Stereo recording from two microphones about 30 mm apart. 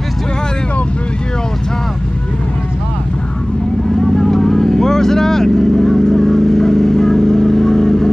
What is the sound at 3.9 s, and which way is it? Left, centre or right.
Vehicle, centre.